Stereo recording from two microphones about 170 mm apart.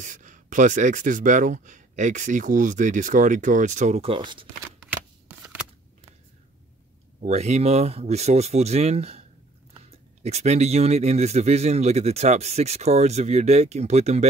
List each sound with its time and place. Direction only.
0.0 s speech: 50° right (ahead or behind); by 4.5 s 30° right (ahead or behind)
7.2 s speech: 40° right (ahead or behind)